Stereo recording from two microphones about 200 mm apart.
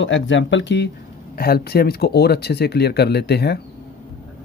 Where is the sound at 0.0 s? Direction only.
70° left (ahead or behind).